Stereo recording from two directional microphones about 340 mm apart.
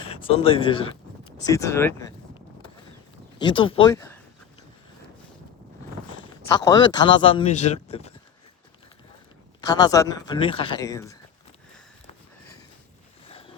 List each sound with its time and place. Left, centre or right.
0.3 s speech: centre
6.6 s speech: centre
9.6 s speech: centre